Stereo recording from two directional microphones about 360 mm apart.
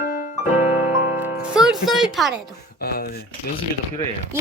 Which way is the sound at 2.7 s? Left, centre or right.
Left.